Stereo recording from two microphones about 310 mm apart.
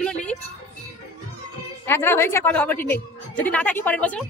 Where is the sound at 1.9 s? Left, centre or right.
Centre.